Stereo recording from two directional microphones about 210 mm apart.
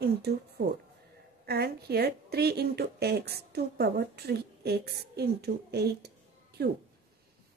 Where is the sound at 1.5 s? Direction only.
50° right (ahead or behind).